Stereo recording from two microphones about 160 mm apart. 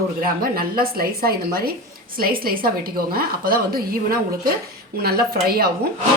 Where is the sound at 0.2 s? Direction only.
65° right (ahead or behind).